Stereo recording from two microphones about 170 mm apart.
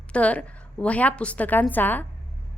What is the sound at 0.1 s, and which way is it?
A woman's voice, 5° left (ahead or behind).